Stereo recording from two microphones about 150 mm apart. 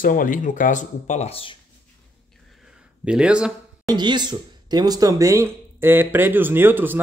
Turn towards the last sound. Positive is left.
turn(degrees=-15)  # may be behind; listen again after turning